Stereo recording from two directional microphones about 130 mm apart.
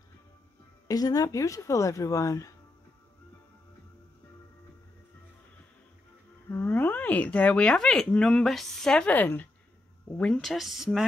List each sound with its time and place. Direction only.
0.8 s speech: 30° left (ahead or behind)
6.5 s speech: 15° left (ahead or behind); by 11.1 s centre (ahead or behind)